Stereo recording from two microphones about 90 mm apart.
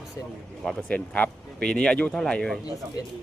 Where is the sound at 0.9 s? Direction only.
15° left (ahead or behind).